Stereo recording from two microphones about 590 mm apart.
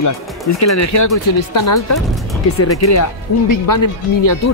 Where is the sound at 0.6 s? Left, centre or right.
Left.